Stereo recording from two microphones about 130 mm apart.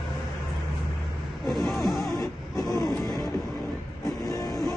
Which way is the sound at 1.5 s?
Centre (ahead or behind).